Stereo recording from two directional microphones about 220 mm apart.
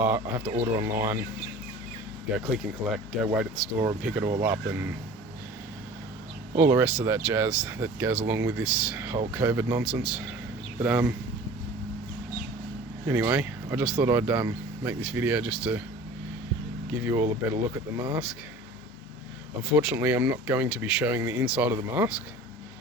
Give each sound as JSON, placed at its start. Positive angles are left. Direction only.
{"t": 0.0, "sound": "speech", "side_deg": -10}
{"t": 2.3, "sound": "speech", "side_deg": 0}
{"t": 6.6, "sound": "speech", "side_deg": -10}
{"t": 13.1, "sound": "speech", "side_deg": -10}
{"t": 16.9, "sound": "speech", "side_deg": -10}
{"t": 19.7, "sound": "speech", "side_deg": -10}